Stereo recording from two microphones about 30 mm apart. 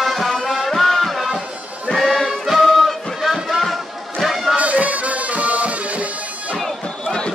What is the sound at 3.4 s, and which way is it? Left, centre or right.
Music, centre.